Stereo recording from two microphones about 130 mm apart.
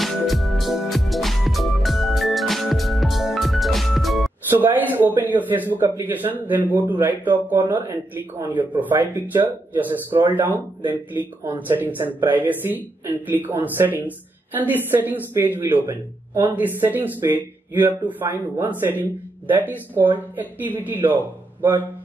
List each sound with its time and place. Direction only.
0.0 s music: centre (ahead or behind)
4.5 s speech: 15° right (ahead or behind)
11.6 s speech: 15° right (ahead or behind)